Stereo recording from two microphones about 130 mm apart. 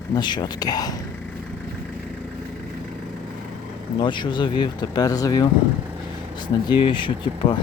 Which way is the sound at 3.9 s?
35° left (ahead or behind).